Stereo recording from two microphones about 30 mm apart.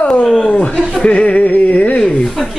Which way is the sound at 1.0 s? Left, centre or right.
Left.